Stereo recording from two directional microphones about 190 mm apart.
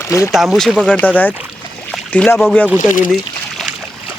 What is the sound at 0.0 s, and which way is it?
Speech, 15° left (ahead or behind).